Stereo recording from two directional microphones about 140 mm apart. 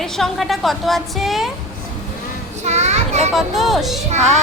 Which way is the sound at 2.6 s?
55° right (ahead or behind).